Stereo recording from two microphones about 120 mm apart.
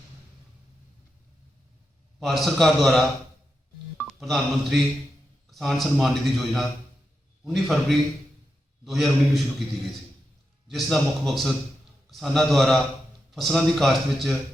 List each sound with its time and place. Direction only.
2.1 s a man's voice: centre (ahead or behind)
4.0 s a man's voice: centre (ahead or behind)
10.7 s a man's voice: centre (ahead or behind)